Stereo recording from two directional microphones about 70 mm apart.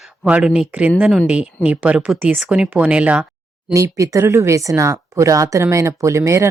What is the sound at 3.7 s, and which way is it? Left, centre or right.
A woman's voice, right.